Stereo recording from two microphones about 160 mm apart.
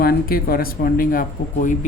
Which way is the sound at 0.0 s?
70° left (ahead or behind).